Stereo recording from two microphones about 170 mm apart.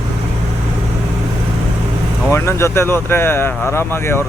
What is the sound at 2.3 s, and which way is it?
Speech, 15° left (ahead or behind).